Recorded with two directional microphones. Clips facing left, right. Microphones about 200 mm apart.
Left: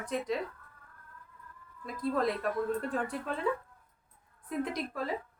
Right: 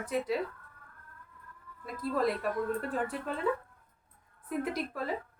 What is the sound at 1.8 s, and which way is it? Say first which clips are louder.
A woman's voice: even; 5° right (ahead or behind).